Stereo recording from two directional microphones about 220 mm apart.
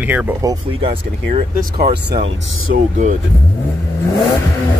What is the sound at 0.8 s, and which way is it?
Speech, 25° right (ahead or behind).